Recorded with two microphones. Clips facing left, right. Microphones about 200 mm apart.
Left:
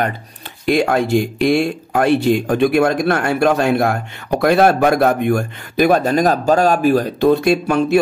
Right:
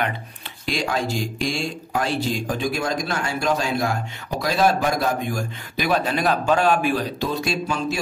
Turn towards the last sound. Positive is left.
turn(degrees=60)  # may be behind; listen again after turning